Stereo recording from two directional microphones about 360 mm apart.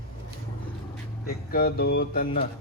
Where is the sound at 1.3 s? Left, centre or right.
Left.